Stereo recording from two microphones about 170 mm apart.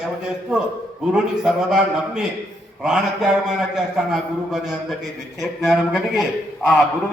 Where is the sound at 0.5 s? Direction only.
5° right (ahead or behind).